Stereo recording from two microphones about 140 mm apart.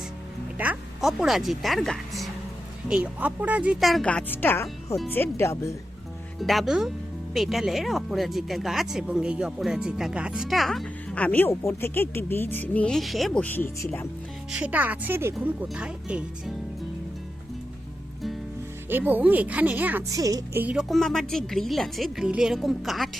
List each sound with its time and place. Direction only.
0.6 s speech: 10° right (ahead or behind)
2.9 s speech: 10° right (ahead or behind); by 5.7 s 20° left (ahead or behind)
6.4 s speech: centre (ahead or behind); by 14.1 s 15° left (ahead or behind)
14.5 s speech: 10° right (ahead or behind)
15.4 s speech: 5° right (ahead or behind)
18.9 s speech: 15° right (ahead or behind)
20.1 s a woman's voice: 25° right (ahead or behind)
20.6 s speech: 5° right (ahead or behind)